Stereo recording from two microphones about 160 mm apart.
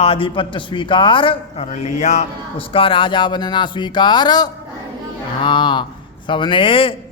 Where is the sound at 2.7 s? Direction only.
35° left (ahead or behind).